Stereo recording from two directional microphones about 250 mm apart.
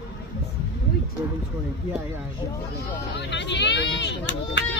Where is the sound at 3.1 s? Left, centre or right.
Left.